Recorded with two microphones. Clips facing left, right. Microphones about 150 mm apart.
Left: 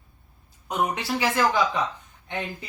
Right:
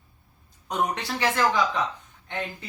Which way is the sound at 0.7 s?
10° left (ahead or behind).